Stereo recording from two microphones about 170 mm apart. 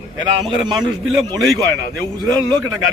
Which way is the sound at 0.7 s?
25° right (ahead or behind).